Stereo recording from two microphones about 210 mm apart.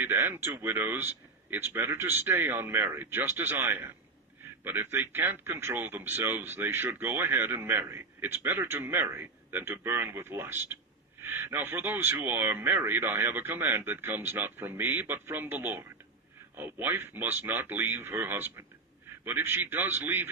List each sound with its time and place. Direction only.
0.0 s speech: 10° right (ahead or behind)